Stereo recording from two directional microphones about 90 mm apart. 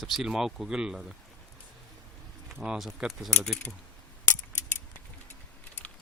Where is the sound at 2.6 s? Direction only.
5° right (ahead or behind).